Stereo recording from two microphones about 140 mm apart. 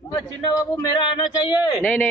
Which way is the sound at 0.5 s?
30° left (ahead or behind).